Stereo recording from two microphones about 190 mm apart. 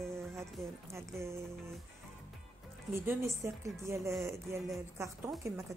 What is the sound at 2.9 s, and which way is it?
Speech, 15° right (ahead or behind).